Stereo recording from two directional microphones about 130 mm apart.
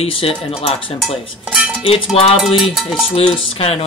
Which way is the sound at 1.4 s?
5° right (ahead or behind).